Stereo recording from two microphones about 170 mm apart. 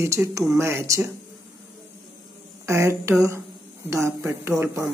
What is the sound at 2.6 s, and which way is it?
Speech, 15° right (ahead or behind).